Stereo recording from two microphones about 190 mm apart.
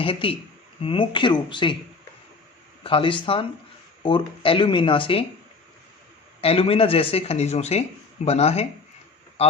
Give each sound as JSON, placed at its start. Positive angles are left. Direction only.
{"t": 0.0, "sound": "speech", "side_deg": 30}
{"t": 2.8, "sound": "speech", "side_deg": 25}
{"t": 6.4, "sound": "speech", "side_deg": 30}